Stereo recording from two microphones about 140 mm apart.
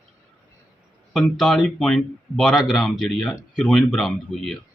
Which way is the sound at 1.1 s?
Centre (ahead or behind).